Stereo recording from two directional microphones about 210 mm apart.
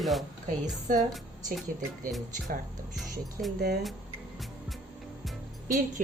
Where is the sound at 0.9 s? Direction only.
40° right (ahead or behind).